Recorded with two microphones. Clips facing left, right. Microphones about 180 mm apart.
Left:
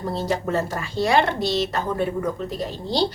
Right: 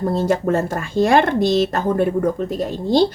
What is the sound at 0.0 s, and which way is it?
Speech, 50° right (ahead or behind).